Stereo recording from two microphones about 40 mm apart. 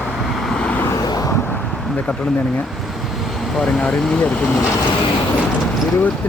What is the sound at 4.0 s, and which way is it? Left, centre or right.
Speech, centre.